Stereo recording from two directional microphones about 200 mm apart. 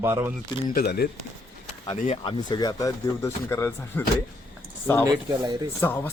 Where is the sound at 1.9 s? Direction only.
40° left (ahead or behind).